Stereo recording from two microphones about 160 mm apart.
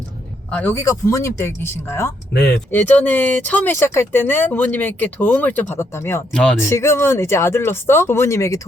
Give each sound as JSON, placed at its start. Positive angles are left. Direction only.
{"t": 0.5, "sound": "speech", "side_deg": 15}
{"t": 6.3, "sound": "speech", "side_deg": 5}
{"t": 6.6, "sound": "speech", "side_deg": 15}